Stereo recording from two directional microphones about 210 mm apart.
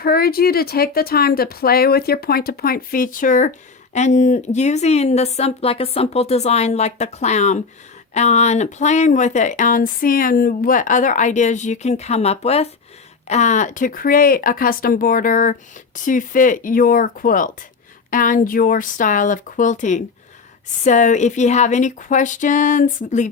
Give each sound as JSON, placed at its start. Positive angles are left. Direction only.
{"t": 0.0, "sound": "speech", "side_deg": 45}